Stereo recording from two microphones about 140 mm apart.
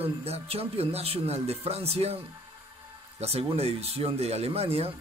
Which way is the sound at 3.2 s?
45° right (ahead or behind).